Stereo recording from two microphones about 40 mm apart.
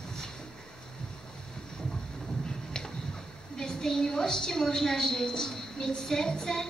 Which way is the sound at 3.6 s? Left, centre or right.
Centre.